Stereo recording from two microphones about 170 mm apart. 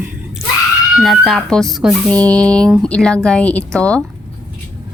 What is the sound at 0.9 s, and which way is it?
A woman's voice, centre (ahead or behind).